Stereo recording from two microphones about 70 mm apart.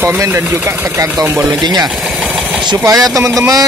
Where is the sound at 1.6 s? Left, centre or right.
Right.